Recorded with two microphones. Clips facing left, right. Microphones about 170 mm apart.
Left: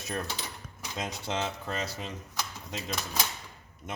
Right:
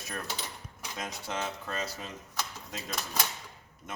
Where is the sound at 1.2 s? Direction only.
25° left (ahead or behind).